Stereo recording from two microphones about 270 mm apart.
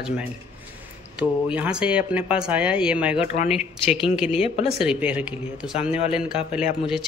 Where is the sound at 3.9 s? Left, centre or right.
Centre.